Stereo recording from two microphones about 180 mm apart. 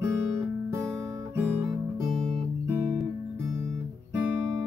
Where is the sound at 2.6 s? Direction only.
10° right (ahead or behind).